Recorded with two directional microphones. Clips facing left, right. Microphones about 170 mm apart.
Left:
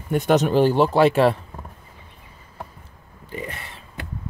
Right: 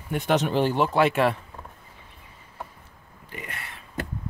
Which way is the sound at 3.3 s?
30° left (ahead or behind).